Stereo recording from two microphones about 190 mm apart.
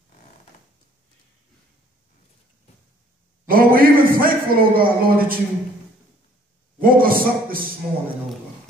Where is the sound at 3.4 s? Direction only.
50° right (ahead or behind).